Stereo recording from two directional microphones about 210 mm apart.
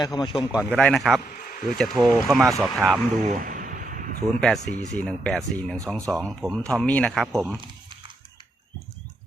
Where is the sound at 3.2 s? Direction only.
40° right (ahead or behind).